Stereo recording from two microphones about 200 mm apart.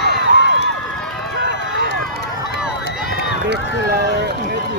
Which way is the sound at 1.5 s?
60° right (ahead or behind).